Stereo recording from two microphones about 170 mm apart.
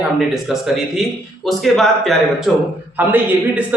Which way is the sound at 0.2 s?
Centre (ahead or behind).